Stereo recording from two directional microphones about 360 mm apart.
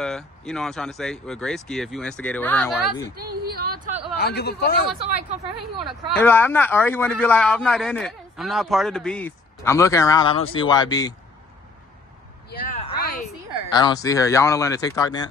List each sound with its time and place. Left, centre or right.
0.0 s a man's voice: centre
3.2 s speech: right
4.2 s speech: left
6.1 s a man's voice: centre
12.4 s a sound: centre
13.7 s speech: centre